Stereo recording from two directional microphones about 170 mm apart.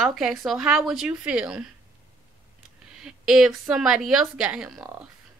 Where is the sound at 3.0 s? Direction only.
5° right (ahead or behind).